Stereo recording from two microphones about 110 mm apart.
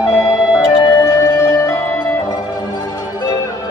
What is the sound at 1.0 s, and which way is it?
Music, 30° left (ahead or behind).